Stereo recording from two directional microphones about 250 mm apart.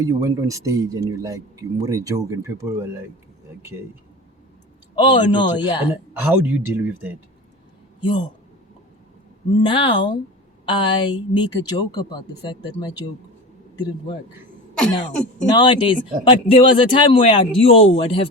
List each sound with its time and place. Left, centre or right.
0.0 s speech: centre
4.9 s a man's voice: centre
6.3 s speech: centre
8.0 s a man's voice: centre
9.6 s a man's voice: centre
14.8 s throat clearing: centre
15.4 s a man's voice: centre